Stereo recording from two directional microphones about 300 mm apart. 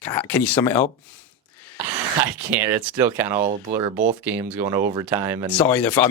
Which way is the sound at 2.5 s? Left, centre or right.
Centre.